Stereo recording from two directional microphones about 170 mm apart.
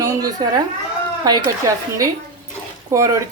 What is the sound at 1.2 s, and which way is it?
Speech, 20° right (ahead or behind).